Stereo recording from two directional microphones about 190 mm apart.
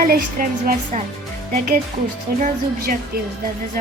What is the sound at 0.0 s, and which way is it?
Speech, 50° right (ahead or behind).